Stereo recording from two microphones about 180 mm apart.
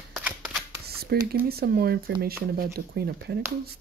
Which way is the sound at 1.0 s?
60° right (ahead or behind).